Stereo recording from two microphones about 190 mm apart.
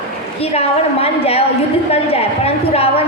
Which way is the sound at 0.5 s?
30° left (ahead or behind).